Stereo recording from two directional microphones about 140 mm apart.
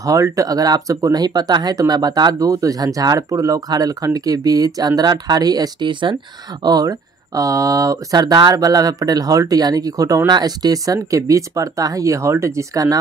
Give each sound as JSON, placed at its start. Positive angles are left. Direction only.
{"t": 0.0, "sound": "speech", "side_deg": -25}